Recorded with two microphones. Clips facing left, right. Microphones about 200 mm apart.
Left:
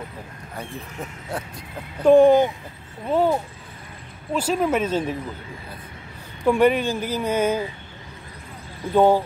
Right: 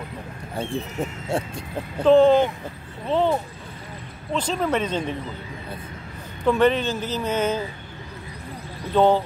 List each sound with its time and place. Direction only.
0.6 s speech: 25° right (ahead or behind)
2.0 s speech: 10° left (ahead or behind)
6.4 s speech: 10° left (ahead or behind)
8.9 s speech: 10° left (ahead or behind)